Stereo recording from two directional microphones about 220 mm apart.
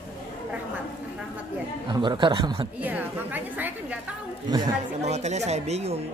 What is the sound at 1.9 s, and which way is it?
Speech, 20° right (ahead or behind).